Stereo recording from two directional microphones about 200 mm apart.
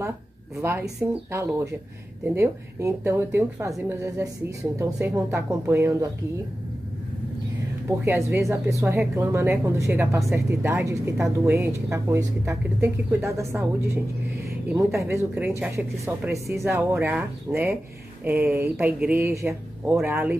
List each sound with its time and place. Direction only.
0.6 s speech: 15° right (ahead or behind)
7.9 s speech: 15° right (ahead or behind)
14.7 s speech: 15° right (ahead or behind)